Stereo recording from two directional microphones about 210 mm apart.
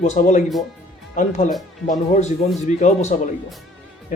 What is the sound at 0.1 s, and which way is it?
Speech, 35° left (ahead or behind).